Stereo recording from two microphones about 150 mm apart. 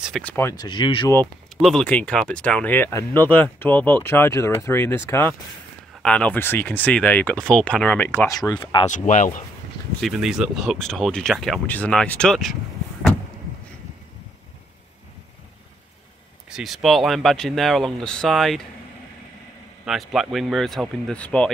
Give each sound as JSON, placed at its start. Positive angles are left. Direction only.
{"t": 0.2, "sound": "speech", "side_deg": 15}
{"t": 0.6, "sound": "speech", "side_deg": 30}
{"t": 1.6, "sound": "speech", "side_deg": 5}
{"t": 8.3, "sound": "speech", "side_deg": 25}
{"t": 8.9, "sound": "speech", "side_deg": 55}
{"t": 9.9, "sound": "speech", "side_deg": 0}
{"t": 16.4, "sound": "speech", "side_deg": -5}
{"t": 19.8, "sound": "speech", "side_deg": 0}